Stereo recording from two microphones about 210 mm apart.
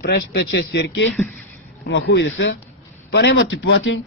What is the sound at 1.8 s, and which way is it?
A man's voice, 60° left (ahead or behind).